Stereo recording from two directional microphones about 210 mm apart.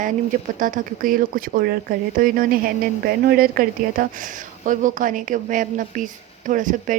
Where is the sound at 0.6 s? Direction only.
40° right (ahead or behind).